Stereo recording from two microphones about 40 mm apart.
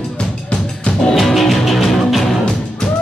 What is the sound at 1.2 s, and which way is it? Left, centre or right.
Music, centre.